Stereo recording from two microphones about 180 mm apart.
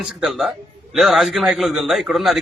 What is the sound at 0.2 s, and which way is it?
A man's voice, centre (ahead or behind).